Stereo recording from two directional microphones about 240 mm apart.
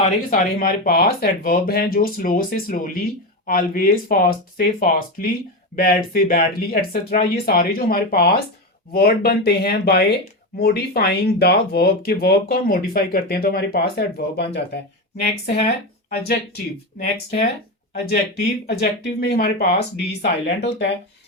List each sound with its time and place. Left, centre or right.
0.3 s speech: left
15.4 s speech: left
16.0 s speech: left